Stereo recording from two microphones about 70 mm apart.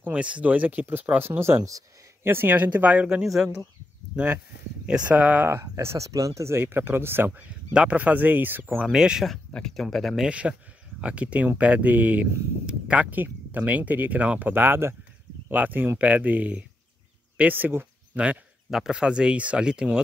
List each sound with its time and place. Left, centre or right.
0.0 s speech: centre; by 1.6 s right
1.6 s speech: right
2.2 s speech: right; by 3.6 s centre
4.8 s speech: centre
5.5 s speech: right
7.7 s speech: centre
8.9 s speech: centre
9.5 s speech: centre
10.2 s speech: centre
18.7 s speech: centre